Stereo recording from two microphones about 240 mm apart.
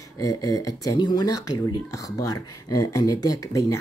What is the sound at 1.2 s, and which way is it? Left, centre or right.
Speech, left.